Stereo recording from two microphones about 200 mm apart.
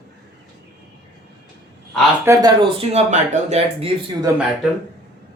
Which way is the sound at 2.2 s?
20° right (ahead or behind).